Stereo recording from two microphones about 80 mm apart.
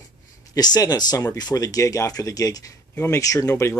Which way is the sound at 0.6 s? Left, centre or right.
Left.